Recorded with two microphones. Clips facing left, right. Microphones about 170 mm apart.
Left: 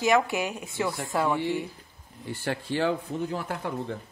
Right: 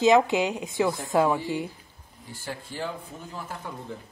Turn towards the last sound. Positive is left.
turn(degrees=70)  # may be behind; listen again after turning